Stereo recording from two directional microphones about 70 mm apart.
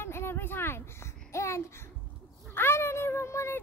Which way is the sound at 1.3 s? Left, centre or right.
Left.